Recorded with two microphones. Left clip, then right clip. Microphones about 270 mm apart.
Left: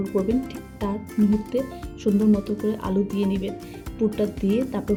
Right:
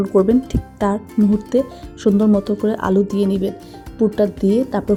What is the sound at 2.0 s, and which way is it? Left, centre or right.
Speech, right.